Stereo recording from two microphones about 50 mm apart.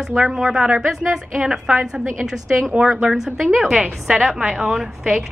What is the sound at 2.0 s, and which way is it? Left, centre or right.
Speech, right.